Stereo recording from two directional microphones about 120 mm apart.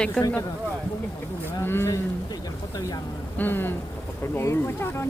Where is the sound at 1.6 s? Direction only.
20° left (ahead or behind).